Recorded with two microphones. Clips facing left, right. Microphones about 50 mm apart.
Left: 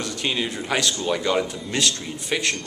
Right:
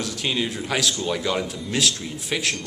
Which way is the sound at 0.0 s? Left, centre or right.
Centre.